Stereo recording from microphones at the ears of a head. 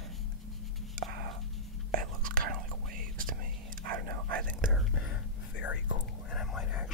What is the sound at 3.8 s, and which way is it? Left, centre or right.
Whispering, right.